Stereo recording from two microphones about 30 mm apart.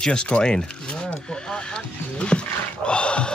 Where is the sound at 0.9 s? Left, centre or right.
Left.